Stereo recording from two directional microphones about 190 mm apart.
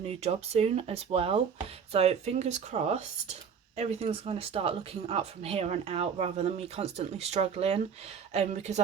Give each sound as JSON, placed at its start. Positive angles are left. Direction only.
{"t": 0.0, "sound": "speech", "side_deg": -35}